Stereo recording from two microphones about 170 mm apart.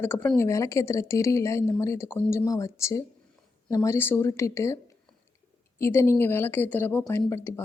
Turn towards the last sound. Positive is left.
turn(degrees=15)  # may be behind; listen again after turning